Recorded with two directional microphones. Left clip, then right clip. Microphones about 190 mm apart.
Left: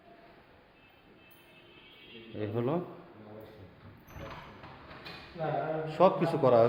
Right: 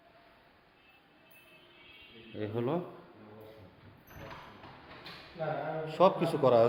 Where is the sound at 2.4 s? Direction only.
5° right (ahead or behind).